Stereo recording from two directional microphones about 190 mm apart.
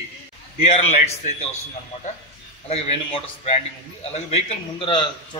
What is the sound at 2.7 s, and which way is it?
A man's voice, 30° left (ahead or behind).